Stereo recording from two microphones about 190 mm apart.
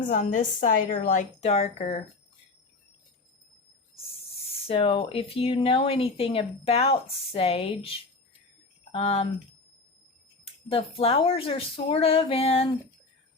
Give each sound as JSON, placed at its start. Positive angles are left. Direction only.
{"t": 0.0, "sound": "a woman's voice", "side_deg": 45}
{"t": 4.6, "sound": "a woman's voice", "side_deg": 30}
{"t": 10.4, "sound": "speech", "side_deg": 30}